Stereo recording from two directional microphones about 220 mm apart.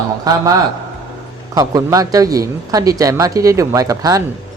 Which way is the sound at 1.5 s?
15° right (ahead or behind).